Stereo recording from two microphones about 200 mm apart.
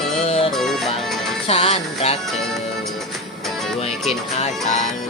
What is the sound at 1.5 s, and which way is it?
Music, 30° left (ahead or behind).